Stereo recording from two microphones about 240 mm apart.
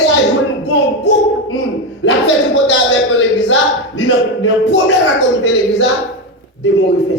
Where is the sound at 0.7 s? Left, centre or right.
Left.